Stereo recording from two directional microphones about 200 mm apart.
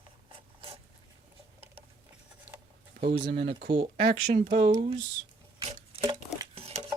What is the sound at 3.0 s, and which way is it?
Speech, 50° right (ahead or behind).